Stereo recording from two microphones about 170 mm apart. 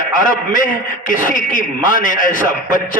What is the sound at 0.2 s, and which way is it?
A man's voice, 50° left (ahead or behind).